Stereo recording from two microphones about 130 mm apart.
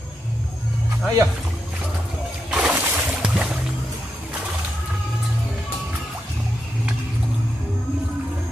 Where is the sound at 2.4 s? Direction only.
5° right (ahead or behind).